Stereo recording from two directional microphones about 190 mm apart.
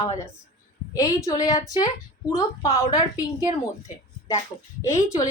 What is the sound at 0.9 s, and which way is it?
A woman's voice, 15° left (ahead or behind).